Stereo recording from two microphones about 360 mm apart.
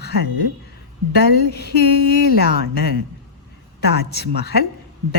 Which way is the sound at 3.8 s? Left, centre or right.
Left.